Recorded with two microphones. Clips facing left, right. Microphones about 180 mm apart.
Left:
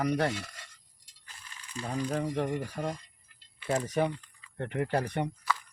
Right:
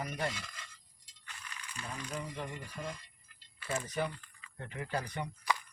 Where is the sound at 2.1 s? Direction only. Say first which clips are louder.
Left 11 dB; 70° left (ahead or behind).